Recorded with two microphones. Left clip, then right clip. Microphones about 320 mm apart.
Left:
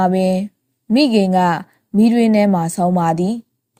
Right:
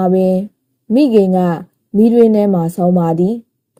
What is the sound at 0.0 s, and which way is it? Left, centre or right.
A woman's voice, left.